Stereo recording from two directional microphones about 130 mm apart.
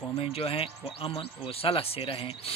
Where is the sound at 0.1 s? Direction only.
50° left (ahead or behind).